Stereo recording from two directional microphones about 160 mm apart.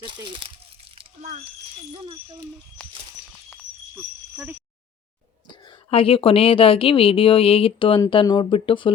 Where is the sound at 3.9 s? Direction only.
10° right (ahead or behind).